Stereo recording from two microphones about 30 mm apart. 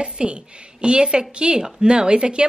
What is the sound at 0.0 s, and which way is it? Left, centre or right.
A woman's voice, right.